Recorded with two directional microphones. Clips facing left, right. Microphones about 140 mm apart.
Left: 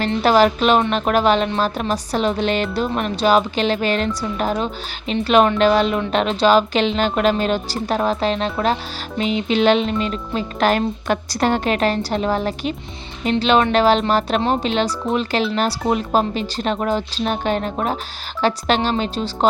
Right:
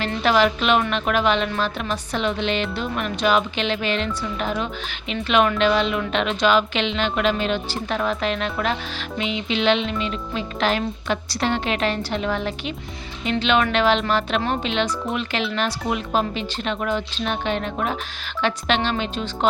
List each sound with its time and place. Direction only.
0.0 s music: 40° left (ahead or behind)
13.2 s speech: 45° left (ahead or behind)
13.7 s music: 40° left (ahead or behind)